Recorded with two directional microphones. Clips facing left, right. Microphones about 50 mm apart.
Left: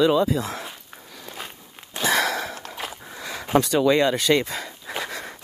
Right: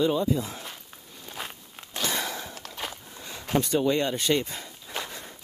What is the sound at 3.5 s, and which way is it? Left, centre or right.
Speech, left.